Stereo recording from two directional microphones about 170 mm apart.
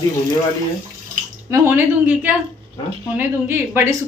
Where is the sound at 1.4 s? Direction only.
15° right (ahead or behind).